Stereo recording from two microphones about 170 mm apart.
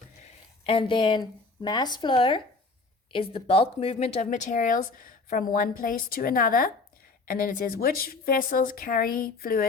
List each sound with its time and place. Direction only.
0.6 s a woman's voice: 30° left (ahead or behind); by 9.6 s 60° left (ahead or behind)